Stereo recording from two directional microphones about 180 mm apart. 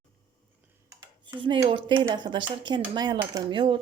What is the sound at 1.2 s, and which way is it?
Speech, 25° right (ahead or behind).